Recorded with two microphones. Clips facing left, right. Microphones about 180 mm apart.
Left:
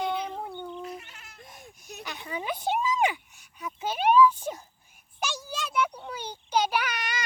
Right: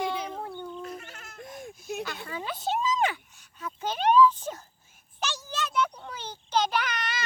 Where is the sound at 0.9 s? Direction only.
45° right (ahead or behind).